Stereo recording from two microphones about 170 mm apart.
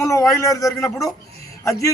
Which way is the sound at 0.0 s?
20° left (ahead or behind).